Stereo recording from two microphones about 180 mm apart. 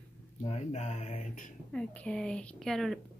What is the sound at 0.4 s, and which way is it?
Speech, 35° left (ahead or behind).